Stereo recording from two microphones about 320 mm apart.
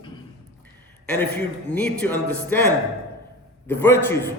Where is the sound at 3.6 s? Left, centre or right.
Centre.